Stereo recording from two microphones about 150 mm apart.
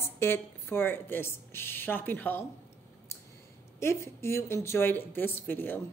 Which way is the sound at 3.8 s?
15° left (ahead or behind).